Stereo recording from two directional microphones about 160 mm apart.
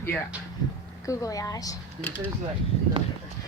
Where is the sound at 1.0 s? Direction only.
20° left (ahead or behind).